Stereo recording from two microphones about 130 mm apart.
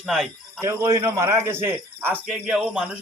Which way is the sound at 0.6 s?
25° right (ahead or behind).